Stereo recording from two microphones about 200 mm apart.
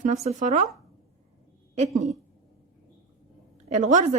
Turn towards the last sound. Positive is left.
turn(degrees=-40)  # may be behind; listen again after turning